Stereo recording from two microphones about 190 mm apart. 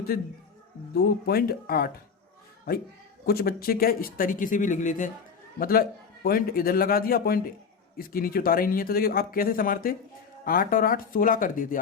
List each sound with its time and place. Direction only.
0.1 s speech: 50° left (ahead or behind)
3.2 s speech: 55° left (ahead or behind)